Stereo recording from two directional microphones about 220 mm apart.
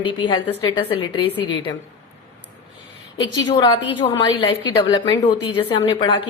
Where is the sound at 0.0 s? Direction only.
20° left (ahead or behind).